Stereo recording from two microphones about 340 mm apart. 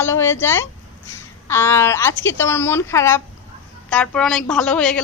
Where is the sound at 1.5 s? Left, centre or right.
Centre.